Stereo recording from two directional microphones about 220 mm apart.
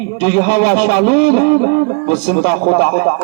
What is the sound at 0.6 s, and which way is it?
A man's voice, 45° left (ahead or behind).